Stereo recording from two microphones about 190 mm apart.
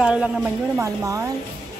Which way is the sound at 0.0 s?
5° right (ahead or behind).